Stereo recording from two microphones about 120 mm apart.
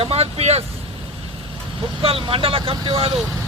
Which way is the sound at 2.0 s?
50° right (ahead or behind).